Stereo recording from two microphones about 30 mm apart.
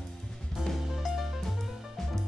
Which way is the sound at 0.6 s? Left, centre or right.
Right.